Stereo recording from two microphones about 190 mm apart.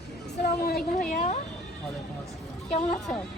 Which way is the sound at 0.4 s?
55° left (ahead or behind).